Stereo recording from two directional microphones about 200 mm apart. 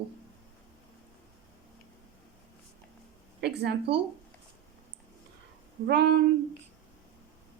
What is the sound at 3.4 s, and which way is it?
Speech, 55° right (ahead or behind).